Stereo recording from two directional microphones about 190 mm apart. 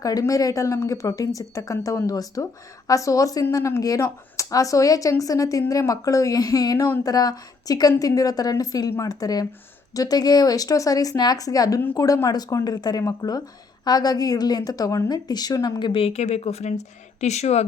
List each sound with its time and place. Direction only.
0.0 s a woman's voice: 20° left (ahead or behind); by 17.7 s 35° left (ahead or behind)